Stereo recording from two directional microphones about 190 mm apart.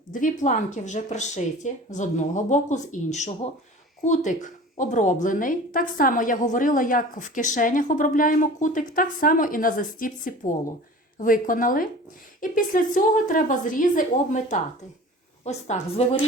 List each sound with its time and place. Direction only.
0.1 s a woman's voice: 40° left (ahead or behind)